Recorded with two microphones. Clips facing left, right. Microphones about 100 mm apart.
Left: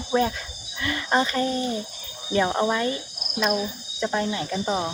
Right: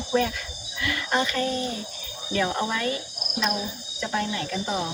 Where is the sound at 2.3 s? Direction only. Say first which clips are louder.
Left 4 dB; 25° left (ahead or behind).